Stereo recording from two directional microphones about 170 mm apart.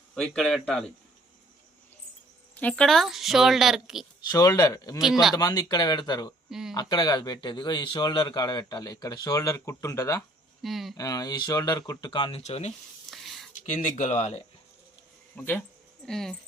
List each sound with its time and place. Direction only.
0.1 s a woman's voice: 5° left (ahead or behind)
2.6 s a woman's voice: 5° left (ahead or behind)
4.3 s a man's voice: 20° left (ahead or behind)
6.5 s a woman's voice: 5° right (ahead or behind)
6.7 s a man's voice: 25° left (ahead or behind)
10.6 s a woman's voice: centre (ahead or behind)
10.9 s a man's voice: 20° left (ahead or behind)
12.4 s speech: 40° left (ahead or behind)
13.1 s a sound: centre (ahead or behind)
13.7 s speech: 45° left (ahead or behind)
15.4 s a woman's voice: 10° left (ahead or behind)